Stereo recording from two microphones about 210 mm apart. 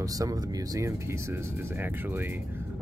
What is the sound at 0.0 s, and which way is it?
Speech, 15° right (ahead or behind).